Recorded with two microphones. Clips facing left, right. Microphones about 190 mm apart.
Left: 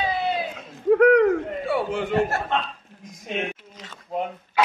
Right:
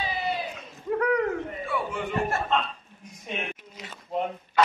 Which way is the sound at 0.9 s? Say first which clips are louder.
Left 9 dB; 80° left.